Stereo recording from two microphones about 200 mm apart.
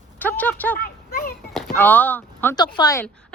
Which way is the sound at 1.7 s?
10° left (ahead or behind).